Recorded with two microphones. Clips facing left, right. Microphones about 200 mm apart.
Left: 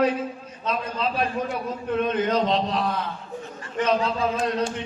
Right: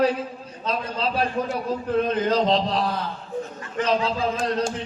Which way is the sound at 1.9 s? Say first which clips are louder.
Right 1 dB; 35° right (ahead or behind).